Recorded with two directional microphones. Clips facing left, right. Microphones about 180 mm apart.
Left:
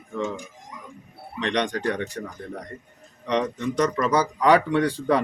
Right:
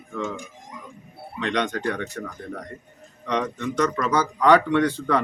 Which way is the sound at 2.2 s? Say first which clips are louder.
Even; 30° left (ahead or behind).